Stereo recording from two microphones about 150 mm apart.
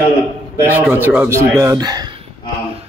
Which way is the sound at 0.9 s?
10° right (ahead or behind).